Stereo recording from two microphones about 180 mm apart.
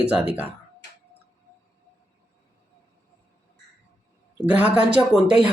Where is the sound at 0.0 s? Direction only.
5° right (ahead or behind).